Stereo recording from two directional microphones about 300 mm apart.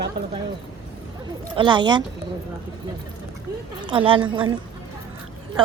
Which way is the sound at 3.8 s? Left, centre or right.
Centre.